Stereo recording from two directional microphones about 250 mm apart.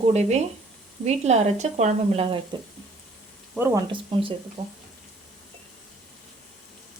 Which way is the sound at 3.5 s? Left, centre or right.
Centre.